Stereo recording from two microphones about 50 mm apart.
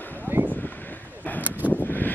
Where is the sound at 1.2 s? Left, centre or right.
Left.